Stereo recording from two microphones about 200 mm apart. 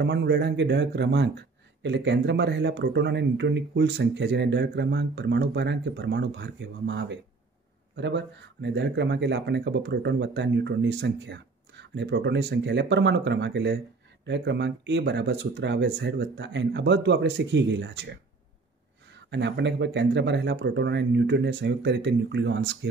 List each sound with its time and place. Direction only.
0.0 s speech: 60° right (ahead or behind)
19.3 s speech: 60° right (ahead or behind)